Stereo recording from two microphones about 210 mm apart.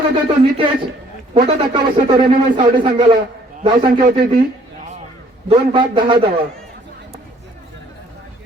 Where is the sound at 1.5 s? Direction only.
25° right (ahead or behind).